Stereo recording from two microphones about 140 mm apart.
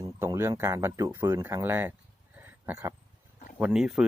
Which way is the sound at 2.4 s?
15° right (ahead or behind).